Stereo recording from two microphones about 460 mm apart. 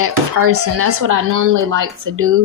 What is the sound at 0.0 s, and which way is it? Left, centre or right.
Speech, right.